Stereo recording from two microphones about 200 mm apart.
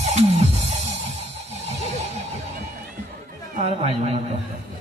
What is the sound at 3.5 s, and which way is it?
Speech, 30° right (ahead or behind).